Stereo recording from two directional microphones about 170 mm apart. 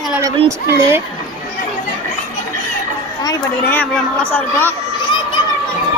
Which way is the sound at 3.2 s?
20° left (ahead or behind).